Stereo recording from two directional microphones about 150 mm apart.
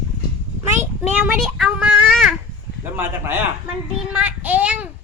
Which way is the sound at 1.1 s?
5° right (ahead or behind).